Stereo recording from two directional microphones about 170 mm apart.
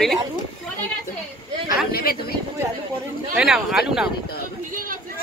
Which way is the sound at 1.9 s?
65° left (ahead or behind).